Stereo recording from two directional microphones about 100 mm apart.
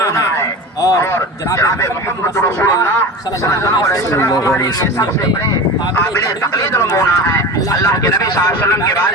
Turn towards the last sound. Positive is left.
turn(degrees=25)  # may be behind; listen again after turning